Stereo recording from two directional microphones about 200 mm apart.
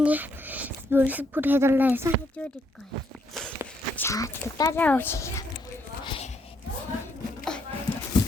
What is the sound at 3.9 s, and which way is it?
Speech, 15° left (ahead or behind).